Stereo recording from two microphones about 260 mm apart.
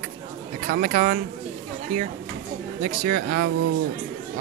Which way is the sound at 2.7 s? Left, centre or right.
Right.